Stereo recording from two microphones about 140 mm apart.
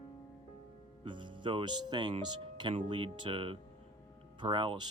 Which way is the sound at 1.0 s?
35° right (ahead or behind).